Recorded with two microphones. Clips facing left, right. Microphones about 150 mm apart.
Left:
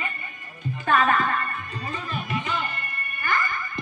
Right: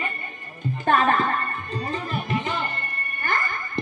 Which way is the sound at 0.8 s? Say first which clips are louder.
Right 1 dB; 35° right (ahead or behind).